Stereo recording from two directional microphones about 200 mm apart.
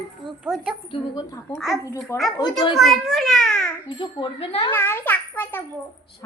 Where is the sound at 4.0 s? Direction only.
25° left (ahead or behind).